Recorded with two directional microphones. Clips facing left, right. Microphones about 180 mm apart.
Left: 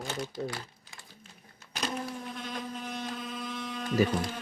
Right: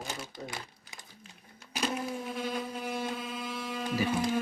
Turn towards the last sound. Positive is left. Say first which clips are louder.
# left 2 dB
turn(degrees=-5)  # may be behind; listen again after turning